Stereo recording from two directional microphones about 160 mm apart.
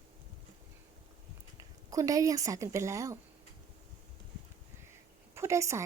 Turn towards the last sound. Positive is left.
turn(degrees=-20)  # may be behind; listen again after turning